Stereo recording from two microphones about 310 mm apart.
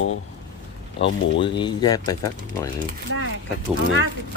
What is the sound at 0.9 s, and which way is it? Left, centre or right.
Speech, left.